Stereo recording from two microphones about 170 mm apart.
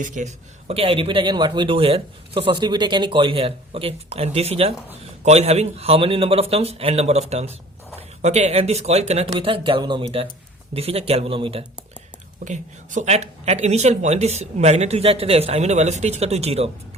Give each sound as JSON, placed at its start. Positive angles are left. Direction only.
{"t": 0.0, "sound": "a man's voice", "side_deg": -45}
{"t": 12.5, "sound": "a man's voice", "side_deg": -45}